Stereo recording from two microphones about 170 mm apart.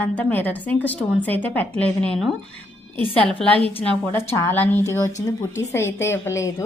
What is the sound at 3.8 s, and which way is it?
A woman's voice, 15° left (ahead or behind).